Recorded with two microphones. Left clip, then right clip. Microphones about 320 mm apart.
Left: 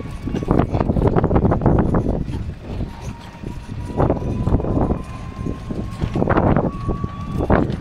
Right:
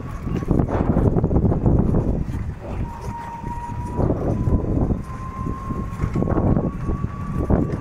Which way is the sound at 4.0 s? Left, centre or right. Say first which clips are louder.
Left 5 dB; left.